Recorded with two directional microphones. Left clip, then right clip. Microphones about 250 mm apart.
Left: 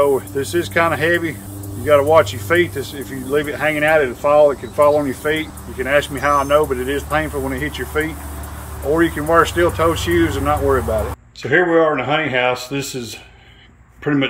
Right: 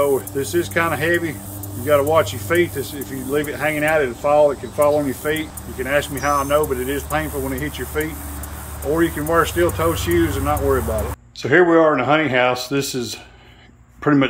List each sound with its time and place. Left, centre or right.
0.0 s speech: centre
11.4 s speech: centre